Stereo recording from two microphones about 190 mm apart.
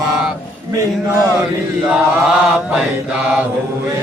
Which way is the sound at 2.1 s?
5° right (ahead or behind).